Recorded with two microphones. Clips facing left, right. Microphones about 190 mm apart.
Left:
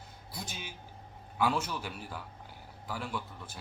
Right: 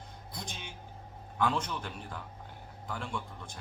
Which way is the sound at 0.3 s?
5° left (ahead or behind).